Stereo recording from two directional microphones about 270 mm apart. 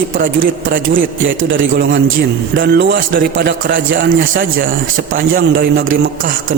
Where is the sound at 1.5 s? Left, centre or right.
Right.